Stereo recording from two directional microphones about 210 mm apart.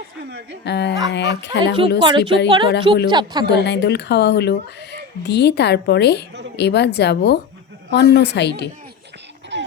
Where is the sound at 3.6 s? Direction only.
55° left (ahead or behind).